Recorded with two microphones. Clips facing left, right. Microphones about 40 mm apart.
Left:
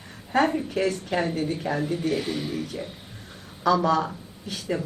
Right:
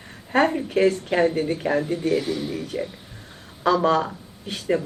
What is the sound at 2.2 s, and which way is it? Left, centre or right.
Speech, left.